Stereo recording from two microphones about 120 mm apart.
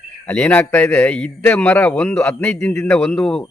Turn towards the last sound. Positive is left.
turn(degrees=5)  # may be behind; listen again after turning